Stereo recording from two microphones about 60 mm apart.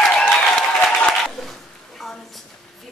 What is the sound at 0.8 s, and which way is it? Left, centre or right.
Applause, centre.